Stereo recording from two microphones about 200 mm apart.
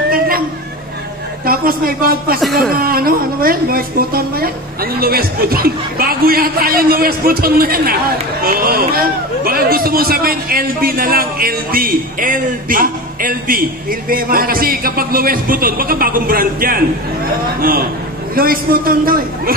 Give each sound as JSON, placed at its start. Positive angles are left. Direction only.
{"t": 1.4, "sound": "a woman's voice", "side_deg": -45}
{"t": 2.4, "sound": "speech", "side_deg": 0}
{"t": 2.7, "sound": "a man's voice", "side_deg": -50}